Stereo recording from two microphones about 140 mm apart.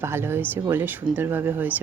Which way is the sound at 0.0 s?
15° right (ahead or behind).